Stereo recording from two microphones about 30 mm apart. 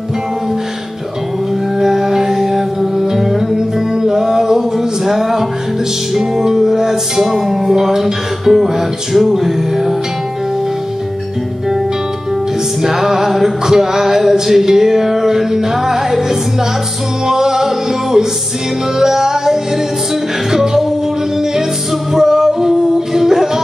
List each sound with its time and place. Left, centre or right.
1.8 s music: centre
12.8 s music: centre
22.1 s music: centre